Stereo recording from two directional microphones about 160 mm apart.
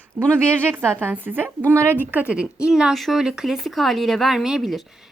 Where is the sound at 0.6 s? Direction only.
15° right (ahead or behind).